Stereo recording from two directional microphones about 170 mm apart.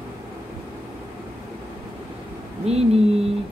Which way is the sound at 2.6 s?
40° right (ahead or behind).